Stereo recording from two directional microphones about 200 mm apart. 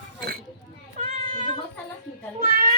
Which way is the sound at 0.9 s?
35° right (ahead or behind).